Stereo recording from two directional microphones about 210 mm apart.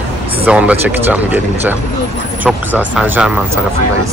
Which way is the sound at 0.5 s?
5° right (ahead or behind).